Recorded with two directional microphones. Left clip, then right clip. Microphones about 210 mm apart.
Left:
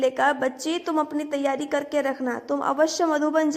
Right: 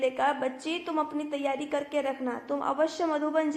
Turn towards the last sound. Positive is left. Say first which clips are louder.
# left 5 dB
turn(degrees=35)  # may be behind; listen again after turning